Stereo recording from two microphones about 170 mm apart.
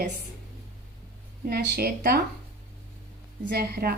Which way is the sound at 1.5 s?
70° right (ahead or behind).